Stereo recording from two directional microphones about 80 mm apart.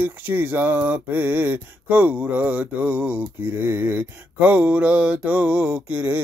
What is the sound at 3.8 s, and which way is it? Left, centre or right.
Speech, right.